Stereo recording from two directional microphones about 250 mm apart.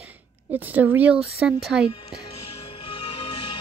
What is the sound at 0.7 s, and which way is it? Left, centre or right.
Speech, centre.